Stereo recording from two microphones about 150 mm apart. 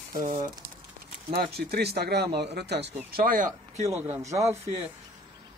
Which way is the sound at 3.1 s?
75° right (ahead or behind).